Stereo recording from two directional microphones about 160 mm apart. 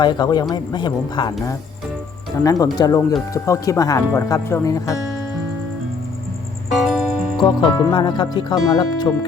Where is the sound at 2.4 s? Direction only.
20° left (ahead or behind).